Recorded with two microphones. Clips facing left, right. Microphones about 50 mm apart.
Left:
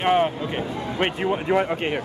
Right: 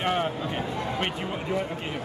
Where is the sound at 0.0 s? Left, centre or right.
Left.